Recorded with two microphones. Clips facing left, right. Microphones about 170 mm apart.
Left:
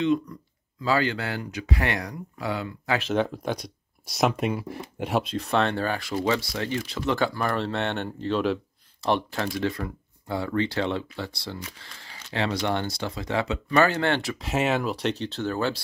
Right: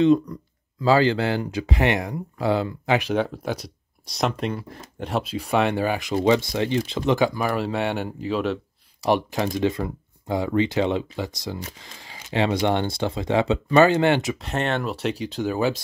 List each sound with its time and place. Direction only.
0.0 s speech: 35° right (ahead or behind)
3.0 s speech: 10° right (ahead or behind); by 5.2 s 5° left (ahead or behind)
5.2 s speech: 10° right (ahead or behind)
9.0 s speech: 15° right (ahead or behind)
14.4 s speech: 5° left (ahead or behind)